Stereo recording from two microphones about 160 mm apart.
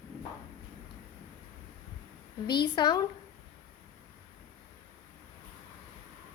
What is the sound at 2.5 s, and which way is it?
Speech, 25° left (ahead or behind).